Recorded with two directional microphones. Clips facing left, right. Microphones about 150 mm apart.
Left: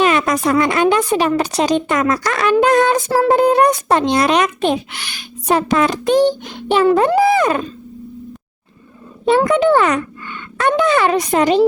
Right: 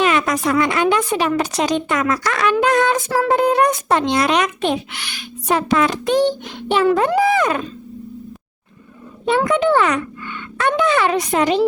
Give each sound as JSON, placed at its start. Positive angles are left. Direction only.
{"t": 0.0, "sound": "a woman's voice", "side_deg": 40}
{"t": 9.2, "sound": "a woman's voice", "side_deg": 35}